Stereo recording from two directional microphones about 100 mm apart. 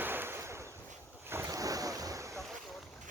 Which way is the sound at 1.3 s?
30° right (ahead or behind).